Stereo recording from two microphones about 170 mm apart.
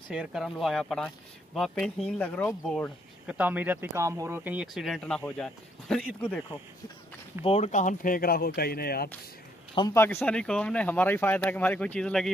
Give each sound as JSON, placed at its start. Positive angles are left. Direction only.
{"t": 0.1, "sound": "speech", "side_deg": -5}
{"t": 3.3, "sound": "speech", "side_deg": -10}
{"t": 7.4, "sound": "speech", "side_deg": 40}
{"t": 9.9, "sound": "speech", "side_deg": 15}